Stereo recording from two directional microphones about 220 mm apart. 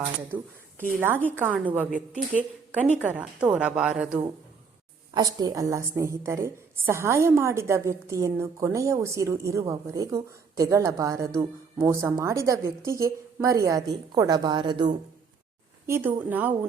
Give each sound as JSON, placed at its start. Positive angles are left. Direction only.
{"t": 0.9, "sound": "a woman's voice", "side_deg": -10}
{"t": 5.1, "sound": "a woman's voice", "side_deg": -20}
{"t": 15.9, "sound": "a woman's voice", "side_deg": -10}